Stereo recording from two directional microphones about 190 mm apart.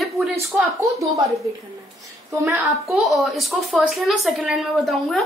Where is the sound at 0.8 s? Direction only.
15° right (ahead or behind).